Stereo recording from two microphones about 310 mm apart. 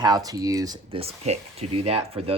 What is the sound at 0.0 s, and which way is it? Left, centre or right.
Speech, centre.